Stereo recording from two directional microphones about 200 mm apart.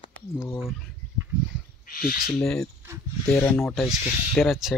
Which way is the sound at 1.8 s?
45° left (ahead or behind).